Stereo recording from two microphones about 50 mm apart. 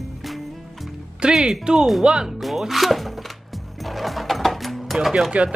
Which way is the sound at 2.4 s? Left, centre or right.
Centre.